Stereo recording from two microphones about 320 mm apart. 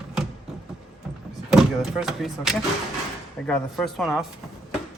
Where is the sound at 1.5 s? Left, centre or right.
Centre.